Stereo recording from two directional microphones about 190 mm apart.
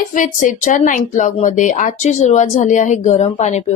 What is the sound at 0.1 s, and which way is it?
A woman's voice, 45° left (ahead or behind).